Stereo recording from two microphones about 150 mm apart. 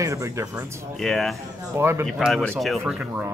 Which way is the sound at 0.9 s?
Centre (ahead or behind).